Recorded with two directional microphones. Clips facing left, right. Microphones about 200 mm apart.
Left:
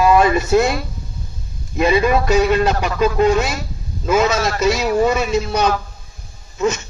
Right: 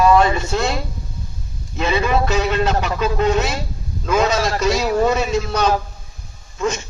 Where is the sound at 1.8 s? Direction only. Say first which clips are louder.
Left 4 dB; 10° left (ahead or behind).